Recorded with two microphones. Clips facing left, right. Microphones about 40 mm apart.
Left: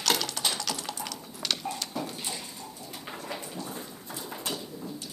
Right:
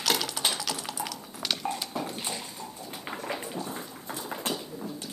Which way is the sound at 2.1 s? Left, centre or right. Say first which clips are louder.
Right 2 dB; right.